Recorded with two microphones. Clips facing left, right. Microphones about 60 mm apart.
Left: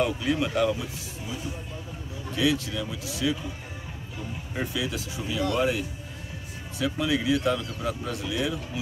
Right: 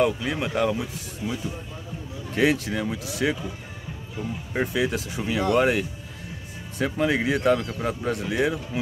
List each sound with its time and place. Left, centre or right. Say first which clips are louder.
0.0 s speech: right 2 dB; right
2.3 s speech: right 4 dB; right
4.6 s speech: right 6 dB; right
6.8 s speech: right 3 dB; right